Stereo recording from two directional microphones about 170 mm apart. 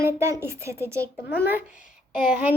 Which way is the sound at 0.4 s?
15° right (ahead or behind).